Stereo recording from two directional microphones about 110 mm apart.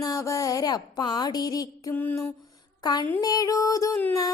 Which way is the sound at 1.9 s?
20° left (ahead or behind).